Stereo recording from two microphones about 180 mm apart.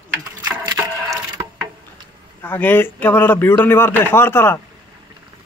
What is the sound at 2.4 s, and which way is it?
A man's voice, 10° left (ahead or behind).